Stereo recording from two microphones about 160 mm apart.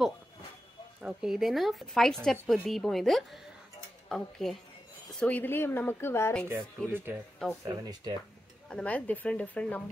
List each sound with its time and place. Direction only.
1.0 s a woman's voice: 5° right (ahead or behind); by 6.4 s 15° left (ahead or behind)
6.9 s speech: 10° right (ahead or behind)
7.6 s speech: 25° right (ahead or behind)
8.6 s speech: 5° left (ahead or behind)